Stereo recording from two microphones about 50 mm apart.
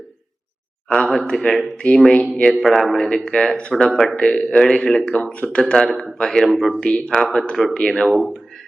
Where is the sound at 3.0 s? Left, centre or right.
Centre.